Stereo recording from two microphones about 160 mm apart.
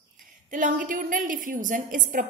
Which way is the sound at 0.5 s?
55° right (ahead or behind).